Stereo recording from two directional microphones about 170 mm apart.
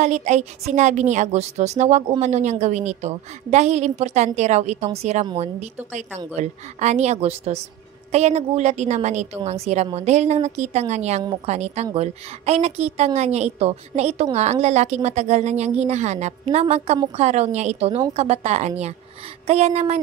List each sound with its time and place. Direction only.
0.0 s a woman's voice: 45° right (ahead or behind)